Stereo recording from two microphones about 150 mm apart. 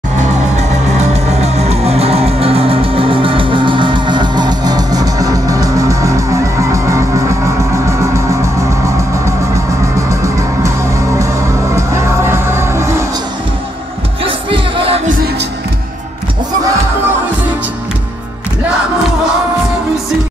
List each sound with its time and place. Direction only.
0.2 s music: 50° right (ahead or behind); by 7.3 s 20° right (ahead or behind)
11.7 s music: 20° right (ahead or behind)
14.2 s music: 40° right (ahead or behind)